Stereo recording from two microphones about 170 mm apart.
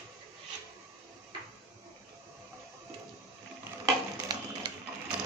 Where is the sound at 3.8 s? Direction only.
20° right (ahead or behind).